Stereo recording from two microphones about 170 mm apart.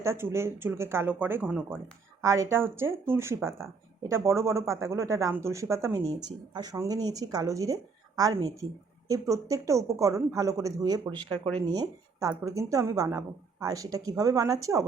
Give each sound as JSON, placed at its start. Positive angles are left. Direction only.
{"t": 0.0, "sound": "speech", "side_deg": -15}